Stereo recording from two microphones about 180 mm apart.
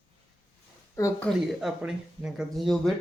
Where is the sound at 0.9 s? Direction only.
15° left (ahead or behind).